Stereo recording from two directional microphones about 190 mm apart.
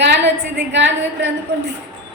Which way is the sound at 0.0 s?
65° right (ahead or behind).